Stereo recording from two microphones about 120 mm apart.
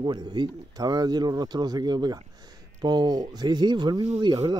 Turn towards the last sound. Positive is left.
turn(degrees=-35)  # may be behind; listen again after turning